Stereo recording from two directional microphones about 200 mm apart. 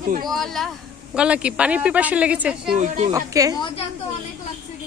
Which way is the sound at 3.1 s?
15° right (ahead or behind).